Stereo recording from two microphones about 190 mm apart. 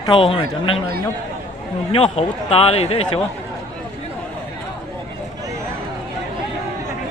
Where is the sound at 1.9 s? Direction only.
30° left (ahead or behind).